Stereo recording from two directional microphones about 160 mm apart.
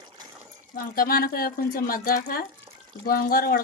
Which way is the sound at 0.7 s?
65° left (ahead or behind).